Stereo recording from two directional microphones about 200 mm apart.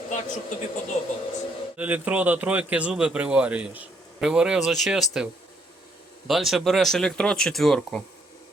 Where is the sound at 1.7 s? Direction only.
5° right (ahead or behind).